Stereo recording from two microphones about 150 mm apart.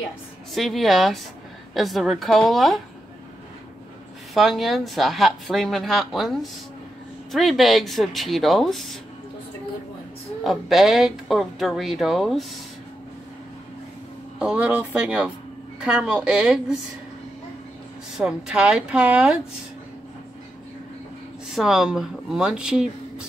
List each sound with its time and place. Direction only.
0.6 s speech: centre (ahead or behind)
4.3 s speech: centre (ahead or behind)
10.4 s speech: centre (ahead or behind)
14.4 s a woman's voice: 10° right (ahead or behind)
18.1 s a woman's voice: 5° right (ahead or behind)
21.5 s speech: 5° right (ahead or behind)